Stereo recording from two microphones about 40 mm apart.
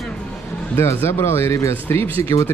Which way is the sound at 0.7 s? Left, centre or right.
Left.